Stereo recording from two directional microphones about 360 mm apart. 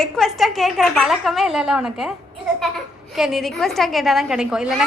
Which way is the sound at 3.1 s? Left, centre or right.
Centre.